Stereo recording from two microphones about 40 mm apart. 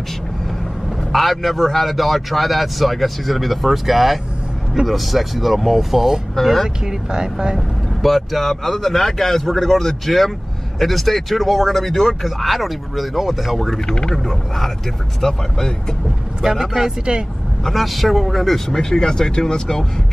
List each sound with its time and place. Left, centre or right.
1.1 s a man's voice: centre
6.9 s speech: centre
7.5 s a man's voice: centre
13.8 s speech: centre
14.1 s a man's voice: centre
17.6 s a man's voice: centre
18.8 s speech: centre